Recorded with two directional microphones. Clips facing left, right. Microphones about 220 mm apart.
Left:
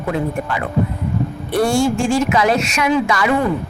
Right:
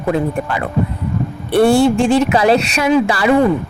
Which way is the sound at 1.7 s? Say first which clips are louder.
Right 5 dB; 60° right (ahead or behind).